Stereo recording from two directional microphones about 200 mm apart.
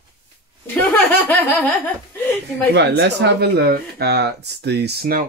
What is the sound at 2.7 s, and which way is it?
Speech, 55° right (ahead or behind).